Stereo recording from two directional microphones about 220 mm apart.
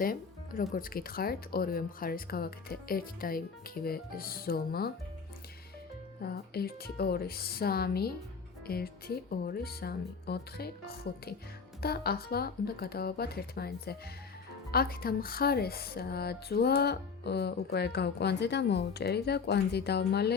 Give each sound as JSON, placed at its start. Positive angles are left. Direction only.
{"t": 0.0, "sound": "speech", "side_deg": 40}
{"t": 6.2, "sound": "speech", "side_deg": 45}